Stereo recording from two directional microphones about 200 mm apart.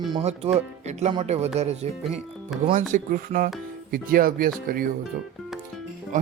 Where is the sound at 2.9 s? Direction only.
45° right (ahead or behind).